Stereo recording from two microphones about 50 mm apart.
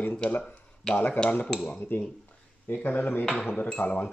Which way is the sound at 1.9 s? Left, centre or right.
Left.